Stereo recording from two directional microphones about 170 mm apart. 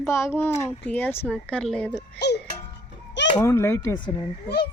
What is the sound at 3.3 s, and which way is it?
Speech, 15° left (ahead or behind).